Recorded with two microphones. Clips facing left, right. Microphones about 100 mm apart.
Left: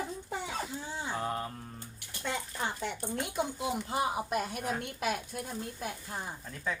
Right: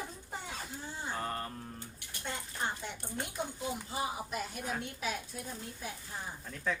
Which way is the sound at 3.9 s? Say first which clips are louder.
Left 8 dB; 65° left (ahead or behind).